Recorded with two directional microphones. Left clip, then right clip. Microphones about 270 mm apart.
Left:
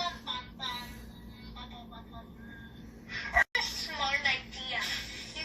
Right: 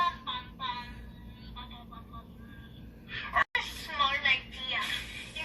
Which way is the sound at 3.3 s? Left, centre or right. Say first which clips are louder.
Left 1 dB; left.